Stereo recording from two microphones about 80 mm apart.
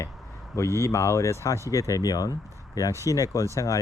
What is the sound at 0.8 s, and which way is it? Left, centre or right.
Speech, left.